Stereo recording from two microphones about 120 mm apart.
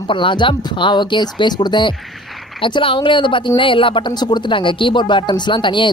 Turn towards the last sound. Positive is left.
turn(degrees=40)  # may be behind; listen again after turning